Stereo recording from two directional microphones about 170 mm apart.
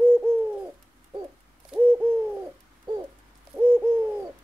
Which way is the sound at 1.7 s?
10° right (ahead or behind).